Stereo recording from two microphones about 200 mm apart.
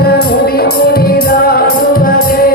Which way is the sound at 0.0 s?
50° left (ahead or behind).